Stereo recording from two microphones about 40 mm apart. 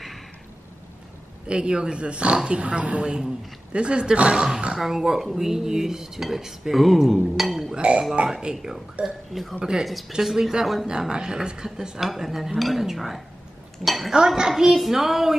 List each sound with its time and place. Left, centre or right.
1.5 s speech: right
4.7 s dishes: centre
7.3 s chink: centre
7.7 s speech: right
8.3 s dishes: centre
9.0 s speech: centre
10.9 s dishes: centre
12.0 s dishes: centre
12.5 s speech: centre
14.1 s dishes: centre